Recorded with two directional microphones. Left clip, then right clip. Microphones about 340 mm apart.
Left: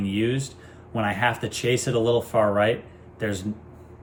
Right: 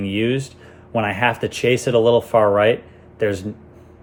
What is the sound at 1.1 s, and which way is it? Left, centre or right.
Speech, centre.